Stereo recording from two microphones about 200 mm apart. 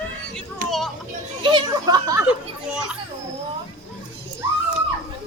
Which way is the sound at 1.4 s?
25° right (ahead or behind).